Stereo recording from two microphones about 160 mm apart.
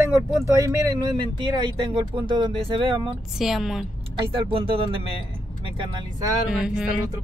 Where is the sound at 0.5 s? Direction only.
20° right (ahead or behind).